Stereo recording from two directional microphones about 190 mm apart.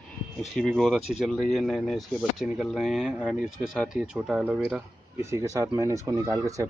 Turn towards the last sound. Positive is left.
turn(degrees=-15)  # may be behind; listen again after turning